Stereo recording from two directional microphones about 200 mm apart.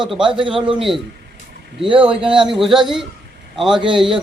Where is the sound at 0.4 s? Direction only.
25° right (ahead or behind).